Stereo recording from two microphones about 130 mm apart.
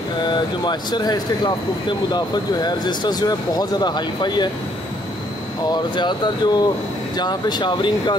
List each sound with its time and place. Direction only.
0.3 s speech: 35° left (ahead or behind)
5.7 s speech: 35° left (ahead or behind)